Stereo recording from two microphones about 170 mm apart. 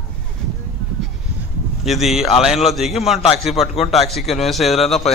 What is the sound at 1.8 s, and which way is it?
A man's voice, centre (ahead or behind).